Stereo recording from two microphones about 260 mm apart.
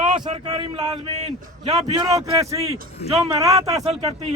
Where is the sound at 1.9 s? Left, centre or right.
Centre.